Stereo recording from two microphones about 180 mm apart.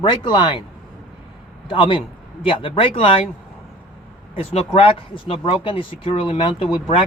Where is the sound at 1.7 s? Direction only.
30° left (ahead or behind).